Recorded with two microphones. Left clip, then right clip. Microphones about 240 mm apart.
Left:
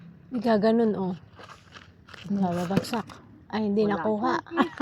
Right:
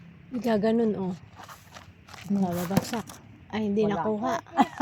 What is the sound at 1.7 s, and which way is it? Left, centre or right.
Biting, right.